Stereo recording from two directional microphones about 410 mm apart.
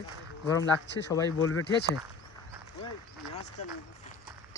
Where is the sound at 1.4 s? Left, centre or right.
Left.